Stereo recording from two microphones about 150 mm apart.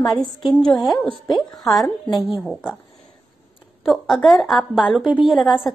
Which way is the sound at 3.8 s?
Centre (ahead or behind).